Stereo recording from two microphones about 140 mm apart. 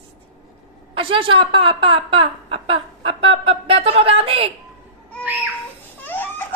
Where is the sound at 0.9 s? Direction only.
40° right (ahead or behind).